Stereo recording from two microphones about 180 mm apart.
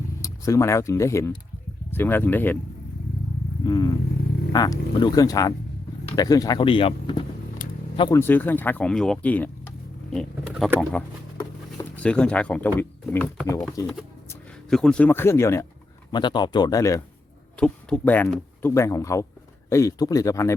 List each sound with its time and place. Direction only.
0.2 s speech: 15° left (ahead or behind)
3.7 s speech: 20° left (ahead or behind)
8.2 s speech: 10° left (ahead or behind)
10.1 s a sound: centre (ahead or behind)
10.9 s speech: 5° left (ahead or behind)
14.7 s speech: 5° left (ahead or behind)
17.6 s speech: 5° left (ahead or behind)